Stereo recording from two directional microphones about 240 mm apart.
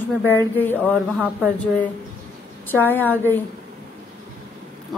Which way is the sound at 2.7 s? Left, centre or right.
Centre.